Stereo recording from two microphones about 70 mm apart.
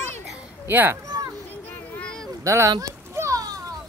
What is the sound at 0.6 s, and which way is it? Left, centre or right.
Speech, right.